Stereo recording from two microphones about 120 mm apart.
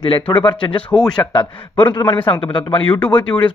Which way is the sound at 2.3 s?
45° left (ahead or behind).